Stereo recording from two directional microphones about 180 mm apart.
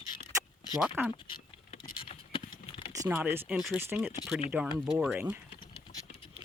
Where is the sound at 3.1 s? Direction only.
10° right (ahead or behind).